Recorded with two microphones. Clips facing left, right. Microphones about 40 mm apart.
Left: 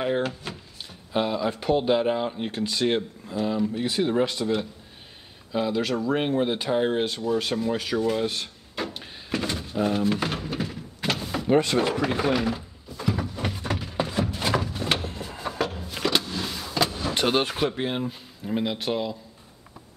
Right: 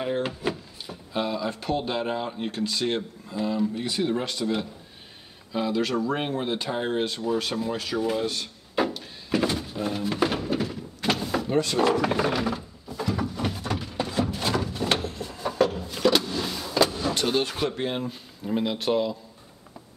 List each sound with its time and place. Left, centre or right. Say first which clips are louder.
0.2 s drawer open or close: right 1 dB; centre
1.1 s speech: left 3 dB; centre
8.8 s a sound: right 6 dB; centre
9.3 s thunk: right 4 dB; centre
9.8 s vehicle: left 4 dB; centre
11.4 s speech: left 3 dB; left
11.9 s a sound: even; centre
15.0 s vehicle: right 1 dB; centre
17.1 s artillery fire: left 2 dB; left
17.6 s speech: left 1 dB; centre